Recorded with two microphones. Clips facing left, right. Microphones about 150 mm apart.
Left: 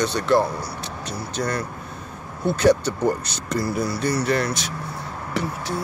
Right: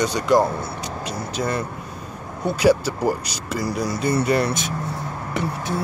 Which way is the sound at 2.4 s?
10° right (ahead or behind).